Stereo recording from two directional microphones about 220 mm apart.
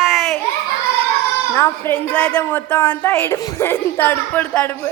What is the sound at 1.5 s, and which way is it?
A woman's voice, 10° left (ahead or behind).